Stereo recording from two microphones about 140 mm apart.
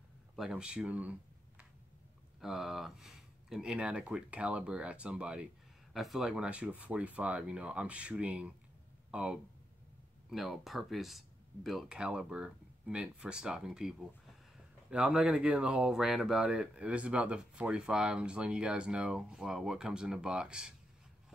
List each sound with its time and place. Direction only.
0.4 s speech: 5° right (ahead or behind)
2.4 s speech: centre (ahead or behind)